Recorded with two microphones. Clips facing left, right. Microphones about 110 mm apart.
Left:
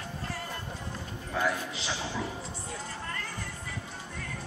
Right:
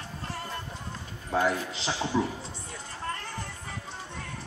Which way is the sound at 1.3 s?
25° right (ahead or behind).